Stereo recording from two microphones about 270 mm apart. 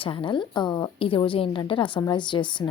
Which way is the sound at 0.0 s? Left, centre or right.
Centre.